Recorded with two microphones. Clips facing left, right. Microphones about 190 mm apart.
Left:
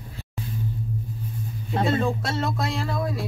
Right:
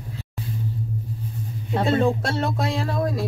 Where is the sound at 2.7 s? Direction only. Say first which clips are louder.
Right 3 dB; 40° right (ahead or behind).